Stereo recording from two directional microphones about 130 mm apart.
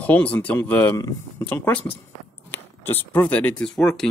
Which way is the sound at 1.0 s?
30° left (ahead or behind).